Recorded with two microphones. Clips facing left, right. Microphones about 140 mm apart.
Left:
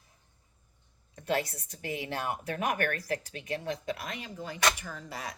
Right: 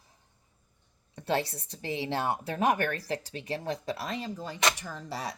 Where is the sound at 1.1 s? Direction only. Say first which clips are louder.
Right 1 dB; 30° right (ahead or behind).